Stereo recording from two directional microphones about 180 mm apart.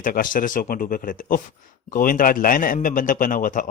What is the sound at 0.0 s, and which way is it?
Speech, 50° left (ahead or behind).